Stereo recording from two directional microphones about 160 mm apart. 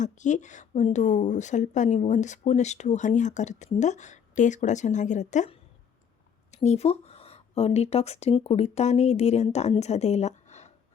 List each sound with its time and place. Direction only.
0.0 s speech: 50° left (ahead or behind)